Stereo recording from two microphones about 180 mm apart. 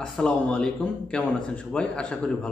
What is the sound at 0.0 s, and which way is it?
A man's voice, 5° left (ahead or behind).